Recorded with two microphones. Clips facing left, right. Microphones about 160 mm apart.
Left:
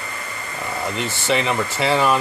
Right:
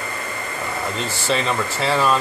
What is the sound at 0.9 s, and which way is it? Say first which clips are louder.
Speech: left 2 dB; 15° left (ahead or behind).